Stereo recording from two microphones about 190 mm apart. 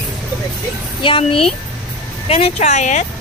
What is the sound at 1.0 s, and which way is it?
Speech, 25° left (ahead or behind).